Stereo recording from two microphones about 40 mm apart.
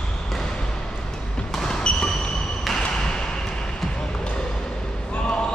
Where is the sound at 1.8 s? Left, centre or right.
Left.